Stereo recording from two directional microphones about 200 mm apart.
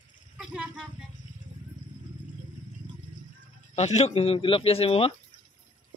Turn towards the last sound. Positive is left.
turn(degrees=30)  # may be behind; listen again after turning